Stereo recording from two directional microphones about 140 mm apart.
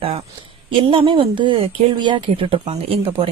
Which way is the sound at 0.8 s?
40° right (ahead or behind).